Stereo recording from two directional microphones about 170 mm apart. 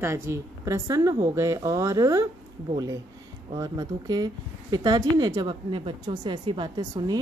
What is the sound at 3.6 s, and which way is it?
A woman's voice, 20° right (ahead or behind).